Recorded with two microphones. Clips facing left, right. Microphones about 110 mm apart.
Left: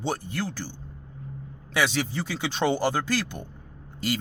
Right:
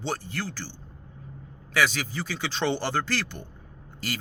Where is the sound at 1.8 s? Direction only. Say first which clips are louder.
Even; 20° left (ahead or behind).